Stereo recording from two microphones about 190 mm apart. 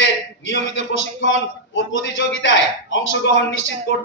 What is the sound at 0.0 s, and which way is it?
A man's voice, 75° left (ahead or behind).